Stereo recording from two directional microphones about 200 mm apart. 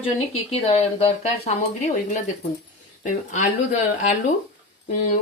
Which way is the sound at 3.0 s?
40° left (ahead or behind).